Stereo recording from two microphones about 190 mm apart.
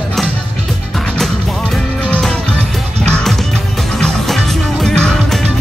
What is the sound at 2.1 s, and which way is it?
Music, centre (ahead or behind).